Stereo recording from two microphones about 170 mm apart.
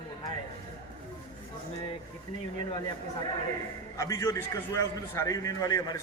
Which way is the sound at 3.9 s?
20° left (ahead or behind).